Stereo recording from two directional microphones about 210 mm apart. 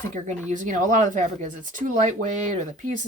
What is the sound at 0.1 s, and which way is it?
Speech, 35° right (ahead or behind).